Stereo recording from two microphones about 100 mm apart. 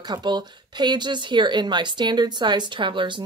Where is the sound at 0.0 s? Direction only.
45° right (ahead or behind).